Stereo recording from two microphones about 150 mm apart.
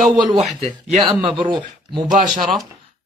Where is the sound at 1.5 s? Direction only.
30° right (ahead or behind).